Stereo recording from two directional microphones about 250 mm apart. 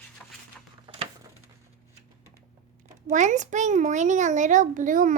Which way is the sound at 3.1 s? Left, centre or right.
Right.